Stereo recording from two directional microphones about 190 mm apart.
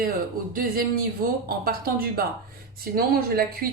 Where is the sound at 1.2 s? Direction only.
50° right (ahead or behind).